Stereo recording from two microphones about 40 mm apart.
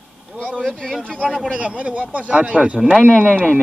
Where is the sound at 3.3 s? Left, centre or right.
Left.